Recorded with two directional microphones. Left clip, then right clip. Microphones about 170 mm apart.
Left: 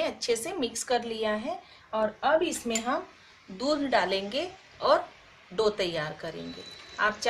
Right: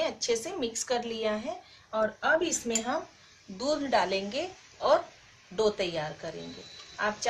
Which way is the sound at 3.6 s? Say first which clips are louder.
Left 1 dB; 15° left (ahead or behind).